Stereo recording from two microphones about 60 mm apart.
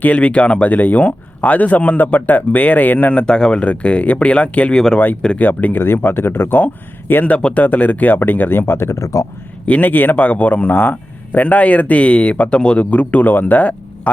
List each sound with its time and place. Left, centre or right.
0.0 s speech: left
4.7 s speech: centre
5.4 s speech: left
9.6 s speech: left